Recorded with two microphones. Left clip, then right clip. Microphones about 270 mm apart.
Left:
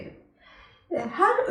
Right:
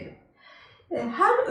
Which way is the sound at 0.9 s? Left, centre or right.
Centre.